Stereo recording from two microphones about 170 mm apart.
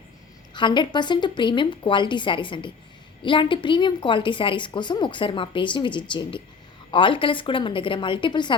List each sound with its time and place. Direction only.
0.5 s a woman's voice: 25° left (ahead or behind)